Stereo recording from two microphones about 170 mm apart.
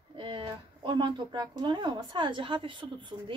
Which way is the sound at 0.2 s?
30° right (ahead or behind).